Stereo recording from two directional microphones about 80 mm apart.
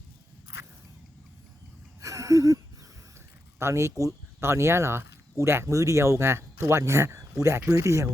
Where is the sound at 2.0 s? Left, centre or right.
Right.